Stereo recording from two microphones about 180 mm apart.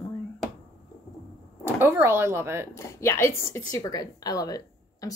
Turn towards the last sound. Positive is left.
turn(degrees=20)  # may be behind; listen again after turning